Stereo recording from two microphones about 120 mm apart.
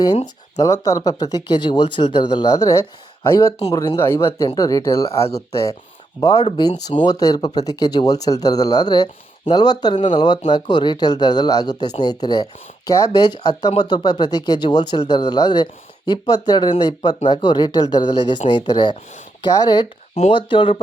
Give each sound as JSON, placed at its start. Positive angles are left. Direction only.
{"t": 0.1, "sound": "speech", "side_deg": 70}
{"t": 0.6, "sound": "speech", "side_deg": 30}
{"t": 6.1, "sound": "speech", "side_deg": 30}